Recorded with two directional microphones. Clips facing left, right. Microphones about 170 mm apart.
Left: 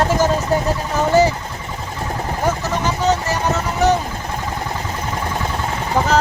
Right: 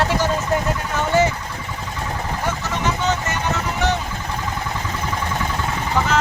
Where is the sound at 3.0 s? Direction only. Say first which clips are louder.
Left 4 dB; 35° left (ahead or behind).